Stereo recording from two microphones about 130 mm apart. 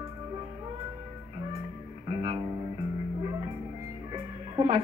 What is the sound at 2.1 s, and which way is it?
Music, 40° right (ahead or behind).